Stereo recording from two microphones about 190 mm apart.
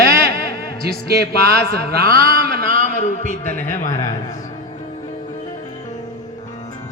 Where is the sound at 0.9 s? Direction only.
55° right (ahead or behind).